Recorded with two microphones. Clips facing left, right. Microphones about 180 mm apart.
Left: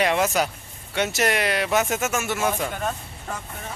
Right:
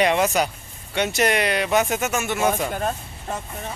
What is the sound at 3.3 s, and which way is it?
Speech, 30° right (ahead or behind).